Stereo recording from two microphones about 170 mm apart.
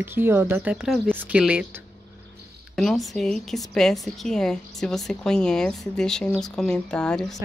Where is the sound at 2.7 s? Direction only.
Centre (ahead or behind).